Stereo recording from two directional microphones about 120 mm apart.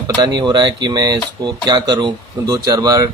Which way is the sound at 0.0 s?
35° right (ahead or behind).